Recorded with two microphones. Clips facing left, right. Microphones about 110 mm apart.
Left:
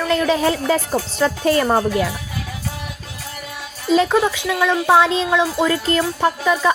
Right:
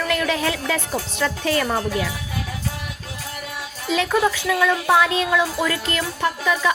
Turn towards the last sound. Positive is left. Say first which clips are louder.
# left 4 dB
turn(degrees=35)  # may be behind; listen again after turning